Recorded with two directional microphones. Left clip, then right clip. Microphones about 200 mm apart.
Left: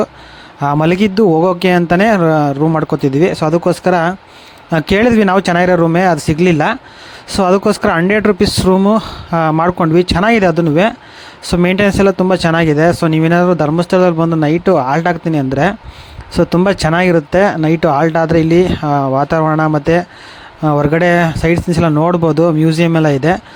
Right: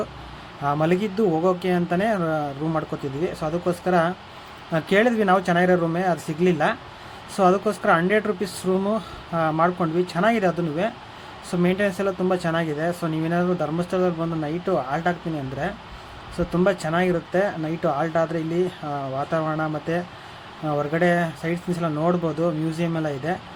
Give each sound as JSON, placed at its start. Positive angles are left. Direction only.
{"t": 0.6, "sound": "speech", "side_deg": 50}
{"t": 16.4, "sound": "speech", "side_deg": 45}